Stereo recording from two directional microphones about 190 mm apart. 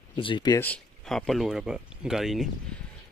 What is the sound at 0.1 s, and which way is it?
Speech, 25° left (ahead or behind).